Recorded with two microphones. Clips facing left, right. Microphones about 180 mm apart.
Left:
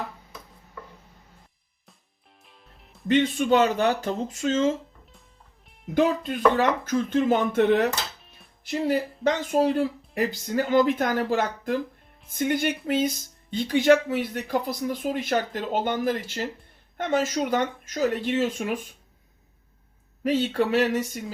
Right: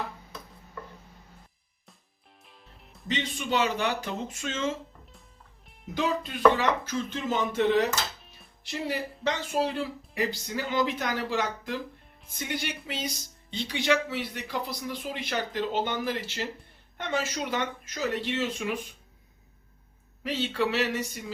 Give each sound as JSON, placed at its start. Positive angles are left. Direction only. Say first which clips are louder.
{"t": 2.4, "sound": "music", "louder": "even", "side_deg": 0}
{"t": 3.1, "sound": "speech", "louder": "left 9 dB", "side_deg": 50}
{"t": 4.3, "sound": "speech", "louder": "left 11 dB", "side_deg": 30}
{"t": 5.6, "sound": "music", "louder": "right 1 dB", "side_deg": 0}
{"t": 5.9, "sound": "speech", "louder": "left 7 dB", "side_deg": 50}
{"t": 8.2, "sound": "music", "louder": "even", "side_deg": 0}
{"t": 8.6, "sound": "speech", "louder": "left 7 dB", "side_deg": 50}
{"t": 20.2, "sound": "speech", "louder": "left 5 dB", "side_deg": 50}